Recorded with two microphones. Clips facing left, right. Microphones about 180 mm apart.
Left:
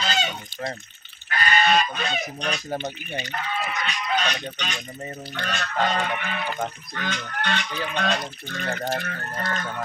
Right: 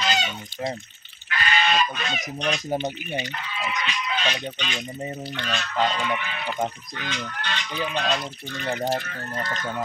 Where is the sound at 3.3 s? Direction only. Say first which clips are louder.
Left 2 dB; 50° left (ahead or behind).